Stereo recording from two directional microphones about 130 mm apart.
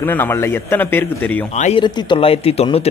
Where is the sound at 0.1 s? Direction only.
15° left (ahead or behind).